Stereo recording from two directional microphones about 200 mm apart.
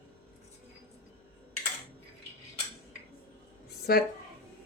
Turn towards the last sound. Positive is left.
turn(degrees=50)  # may be behind; listen again after turning